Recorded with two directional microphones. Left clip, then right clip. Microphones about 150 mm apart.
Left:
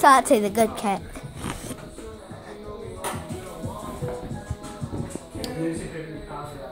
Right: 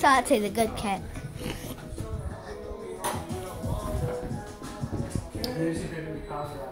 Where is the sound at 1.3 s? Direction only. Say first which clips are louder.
Left 3 dB; 60° left (ahead or behind).